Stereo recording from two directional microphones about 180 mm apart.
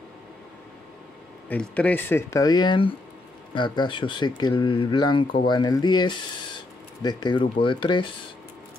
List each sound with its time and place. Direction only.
1.5 s speech: 5° left (ahead or behind); by 8.1 s 25° left (ahead or behind)